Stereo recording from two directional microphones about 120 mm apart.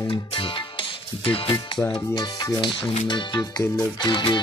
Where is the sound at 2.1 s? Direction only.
40° left (ahead or behind).